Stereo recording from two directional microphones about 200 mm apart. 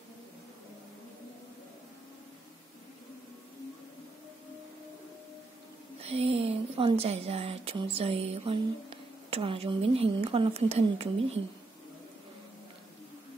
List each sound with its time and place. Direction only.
5.9 s speech: 30° right (ahead or behind)